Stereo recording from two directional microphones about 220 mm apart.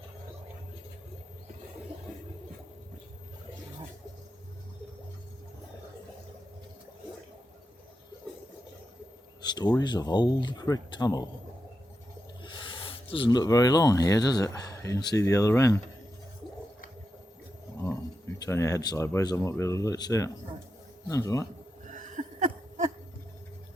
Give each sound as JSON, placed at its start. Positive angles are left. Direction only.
{"t": 9.4, "sound": "speech", "side_deg": 20}
{"t": 12.4, "sound": "speech", "side_deg": 25}
{"t": 18.3, "sound": "speech", "side_deg": 15}
{"t": 21.8, "sound": "a sound", "side_deg": -35}